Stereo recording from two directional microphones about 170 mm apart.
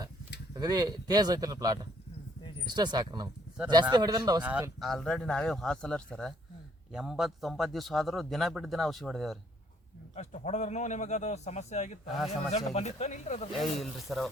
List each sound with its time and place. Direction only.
0.5 s speech: 25° right (ahead or behind)
4.4 s speech: 10° right (ahead or behind)
4.8 s a man's voice: centre (ahead or behind)
10.2 s a man's voice: 40° left (ahead or behind)
13.6 s a man's voice: centre (ahead or behind)